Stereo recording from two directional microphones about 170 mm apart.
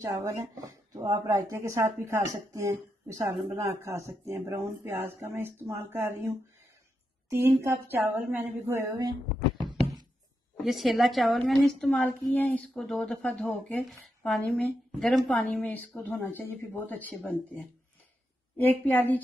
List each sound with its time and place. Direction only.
0.0 s speech: 20° right (ahead or behind)
4.4 s speech: 5° right (ahead or behind)
9.6 s knock: centre (ahead or behind)
10.6 s speech: centre (ahead or behind)